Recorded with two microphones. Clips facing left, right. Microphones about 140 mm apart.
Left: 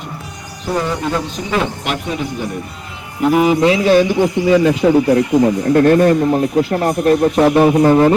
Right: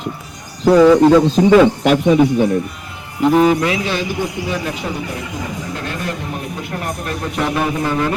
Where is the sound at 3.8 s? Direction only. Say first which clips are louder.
Left 10 dB; 45° left (ahead or behind).